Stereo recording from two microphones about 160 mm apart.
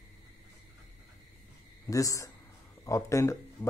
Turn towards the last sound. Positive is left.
turn(degrees=20)  # may be behind; listen again after turning